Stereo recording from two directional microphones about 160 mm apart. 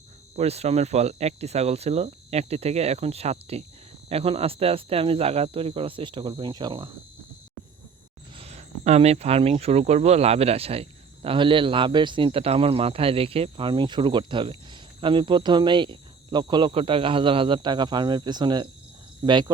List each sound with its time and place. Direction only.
0.3 s speech: 40° right (ahead or behind)
8.4 s speech: 45° right (ahead or behind); by 19.5 s 30° right (ahead or behind)